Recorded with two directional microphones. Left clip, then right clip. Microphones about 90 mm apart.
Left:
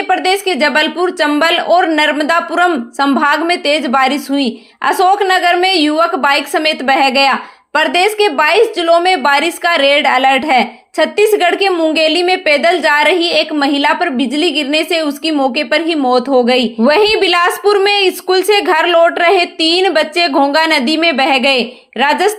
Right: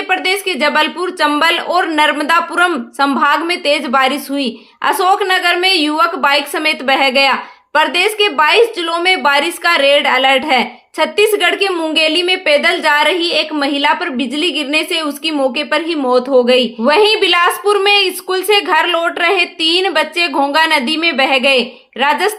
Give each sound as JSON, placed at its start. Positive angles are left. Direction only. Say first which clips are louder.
{"t": 0.1, "sound": "a woman's voice", "louder": "left 2 dB", "side_deg": 30}
{"t": 16.8, "sound": "a woman's voice", "louder": "left 2 dB", "side_deg": 65}